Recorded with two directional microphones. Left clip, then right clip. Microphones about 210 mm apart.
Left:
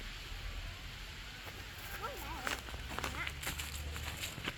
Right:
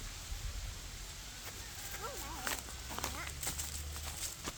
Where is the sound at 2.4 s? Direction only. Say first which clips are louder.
Left 1 dB; 35° right (ahead or behind).